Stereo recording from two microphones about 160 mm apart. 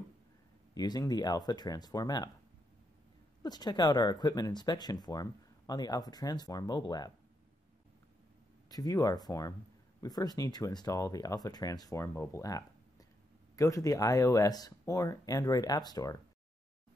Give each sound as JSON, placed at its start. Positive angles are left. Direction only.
{"t": 0.7, "sound": "speech", "side_deg": 25}
{"t": 3.4, "sound": "speech", "side_deg": 25}
{"t": 8.6, "sound": "speech", "side_deg": 25}